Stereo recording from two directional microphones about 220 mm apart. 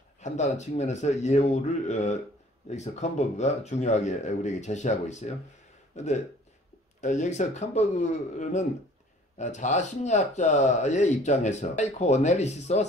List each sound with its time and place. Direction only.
0.2 s speech: 30° left (ahead or behind)
7.0 s speech: 35° left (ahead or behind)